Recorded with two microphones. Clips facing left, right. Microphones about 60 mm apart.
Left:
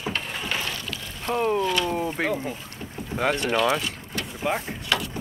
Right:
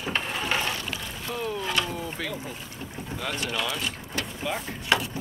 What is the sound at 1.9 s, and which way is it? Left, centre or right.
Speech, left.